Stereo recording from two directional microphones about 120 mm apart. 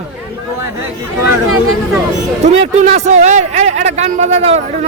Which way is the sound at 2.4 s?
70° right (ahead or behind).